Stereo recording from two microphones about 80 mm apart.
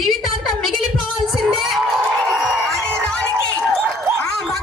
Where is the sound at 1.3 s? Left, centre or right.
Centre.